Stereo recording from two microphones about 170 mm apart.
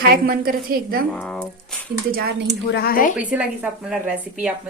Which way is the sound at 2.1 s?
65° right (ahead or behind).